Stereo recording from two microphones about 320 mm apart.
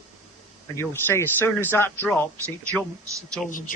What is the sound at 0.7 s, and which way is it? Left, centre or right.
Speech, centre.